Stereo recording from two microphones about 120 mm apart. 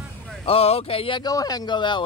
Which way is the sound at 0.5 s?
55° left (ahead or behind).